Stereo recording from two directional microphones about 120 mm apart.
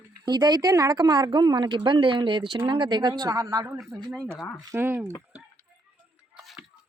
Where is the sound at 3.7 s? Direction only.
Centre (ahead or behind).